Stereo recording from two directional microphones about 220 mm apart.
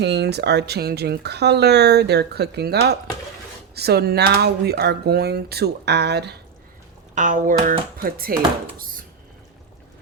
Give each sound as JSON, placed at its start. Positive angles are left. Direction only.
{"t": 0.0, "sound": "speech", "side_deg": -50}
{"t": 7.2, "sound": "speech", "side_deg": -35}
{"t": 8.8, "sound": "dishes", "side_deg": -40}